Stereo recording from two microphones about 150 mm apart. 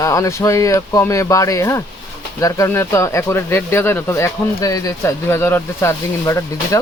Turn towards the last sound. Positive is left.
turn(degrees=20)  # may be behind; listen again after turning